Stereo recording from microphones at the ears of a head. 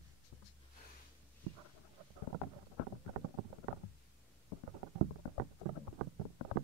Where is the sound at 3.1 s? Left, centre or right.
Right.